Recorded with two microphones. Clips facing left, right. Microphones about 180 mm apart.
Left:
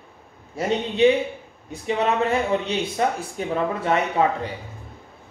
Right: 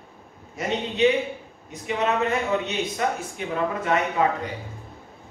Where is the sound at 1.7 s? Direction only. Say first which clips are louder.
Left 4 dB; 30° left (ahead or behind).